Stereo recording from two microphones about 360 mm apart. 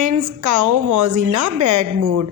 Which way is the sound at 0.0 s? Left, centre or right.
Right.